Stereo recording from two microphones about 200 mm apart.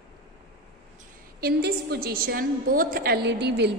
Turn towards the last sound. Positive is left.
turn(degrees=-55)  # may be behind; listen again after turning